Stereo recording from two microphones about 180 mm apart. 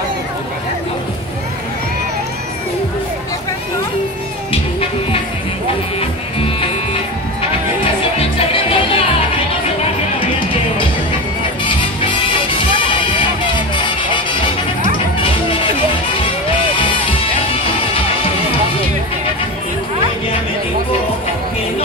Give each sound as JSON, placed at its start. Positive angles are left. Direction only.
{"t": 4.5, "sound": "music", "side_deg": 35}
{"t": 8.2, "sound": "music", "side_deg": 30}
{"t": 11.6, "sound": "music", "side_deg": 30}
{"t": 16.7, "sound": "music", "side_deg": 30}